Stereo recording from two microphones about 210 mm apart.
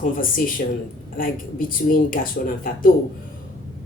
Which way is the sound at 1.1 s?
40° left (ahead or behind).